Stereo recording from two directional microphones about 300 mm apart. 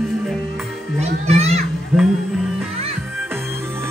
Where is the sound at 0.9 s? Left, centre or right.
Right.